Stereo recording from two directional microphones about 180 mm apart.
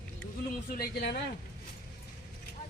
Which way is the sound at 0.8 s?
65° left (ahead or behind).